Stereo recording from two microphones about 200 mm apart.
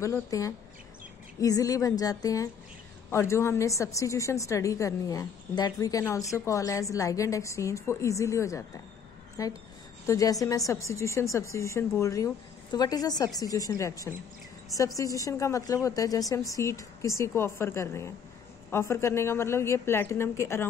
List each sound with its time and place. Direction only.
0.0 s a woman's voice: 15° left (ahead or behind)